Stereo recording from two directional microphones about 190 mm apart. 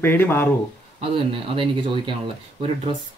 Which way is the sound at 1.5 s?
25° right (ahead or behind).